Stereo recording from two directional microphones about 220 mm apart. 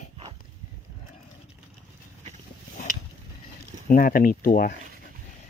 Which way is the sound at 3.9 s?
40° left (ahead or behind).